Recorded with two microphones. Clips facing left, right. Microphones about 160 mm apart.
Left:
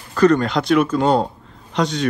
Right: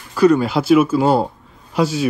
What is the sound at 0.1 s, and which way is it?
A man's voice, 10° right (ahead or behind).